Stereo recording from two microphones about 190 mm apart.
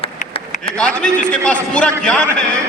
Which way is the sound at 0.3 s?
30° left (ahead or behind).